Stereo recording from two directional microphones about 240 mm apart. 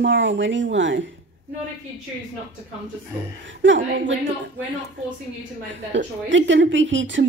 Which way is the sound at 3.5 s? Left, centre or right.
Right.